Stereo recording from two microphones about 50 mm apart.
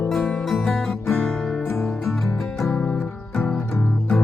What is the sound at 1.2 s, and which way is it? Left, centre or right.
Music, centre.